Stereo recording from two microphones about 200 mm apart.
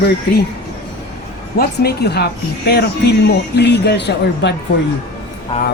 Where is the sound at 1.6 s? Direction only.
55° left (ahead or behind).